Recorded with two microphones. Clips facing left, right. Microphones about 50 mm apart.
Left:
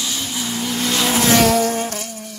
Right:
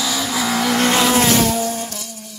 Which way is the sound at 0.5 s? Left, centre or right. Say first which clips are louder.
Right 6 dB; right.